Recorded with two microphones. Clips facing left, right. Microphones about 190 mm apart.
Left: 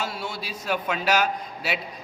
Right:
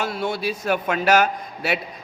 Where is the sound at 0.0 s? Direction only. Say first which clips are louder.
Right 7 dB; 55° right (ahead or behind).